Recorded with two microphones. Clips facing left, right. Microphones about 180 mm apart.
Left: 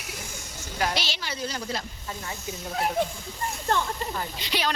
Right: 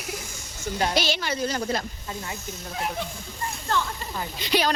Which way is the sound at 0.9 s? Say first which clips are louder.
Right 6 dB; 50° right (ahead or behind).